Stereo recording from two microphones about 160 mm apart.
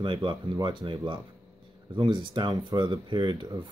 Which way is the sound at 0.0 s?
30° right (ahead or behind).